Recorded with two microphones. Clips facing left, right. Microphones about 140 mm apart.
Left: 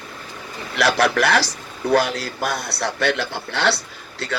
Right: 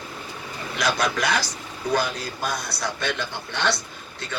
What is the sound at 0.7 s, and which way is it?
Speech, 70° left (ahead or behind).